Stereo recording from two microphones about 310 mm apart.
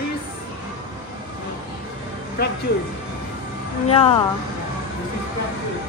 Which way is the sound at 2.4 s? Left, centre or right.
Left.